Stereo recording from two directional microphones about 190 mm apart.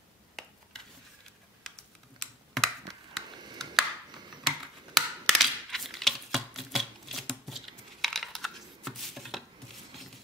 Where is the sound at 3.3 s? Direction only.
20° right (ahead or behind).